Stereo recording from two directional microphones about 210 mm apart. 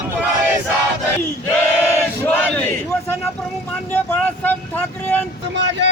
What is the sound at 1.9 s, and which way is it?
Battle cry, 10° left (ahead or behind).